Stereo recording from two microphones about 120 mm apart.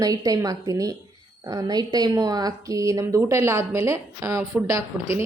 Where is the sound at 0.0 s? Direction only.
30° right (ahead or behind).